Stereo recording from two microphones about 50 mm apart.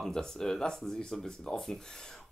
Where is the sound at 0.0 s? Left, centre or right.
Centre.